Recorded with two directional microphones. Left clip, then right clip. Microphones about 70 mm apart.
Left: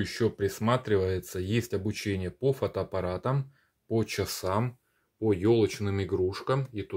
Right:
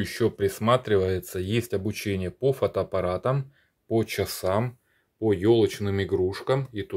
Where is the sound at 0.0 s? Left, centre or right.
Right.